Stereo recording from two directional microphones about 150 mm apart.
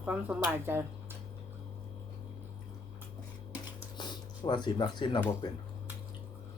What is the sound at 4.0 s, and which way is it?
Speech, 30° left (ahead or behind).